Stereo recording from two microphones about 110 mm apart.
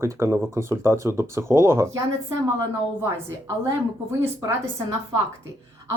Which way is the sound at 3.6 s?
30° right (ahead or behind).